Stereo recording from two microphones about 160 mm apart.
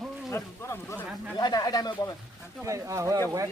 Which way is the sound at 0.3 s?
15° left (ahead or behind).